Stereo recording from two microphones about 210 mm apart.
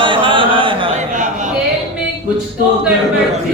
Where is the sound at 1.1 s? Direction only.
35° right (ahead or behind).